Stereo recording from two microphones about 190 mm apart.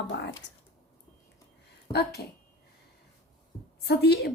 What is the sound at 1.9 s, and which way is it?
Speech, 60° left (ahead or behind).